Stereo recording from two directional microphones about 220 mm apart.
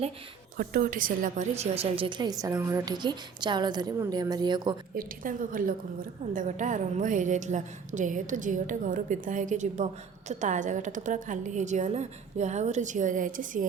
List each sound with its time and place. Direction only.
0.5 s a woman's voice: 40° right (ahead or behind); by 4.8 s 20° right (ahead or behind)
4.9 s a woman's voice: 40° right (ahead or behind)